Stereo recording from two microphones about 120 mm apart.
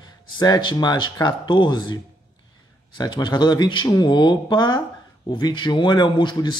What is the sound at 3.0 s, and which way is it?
Speech, 40° left (ahead or behind).